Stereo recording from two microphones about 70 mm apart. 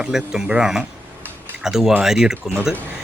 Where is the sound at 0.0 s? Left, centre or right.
Centre.